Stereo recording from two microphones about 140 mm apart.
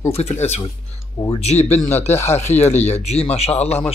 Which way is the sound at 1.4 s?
50° left (ahead or behind).